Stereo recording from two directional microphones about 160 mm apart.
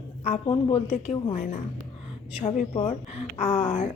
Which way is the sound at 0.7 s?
45° left (ahead or behind).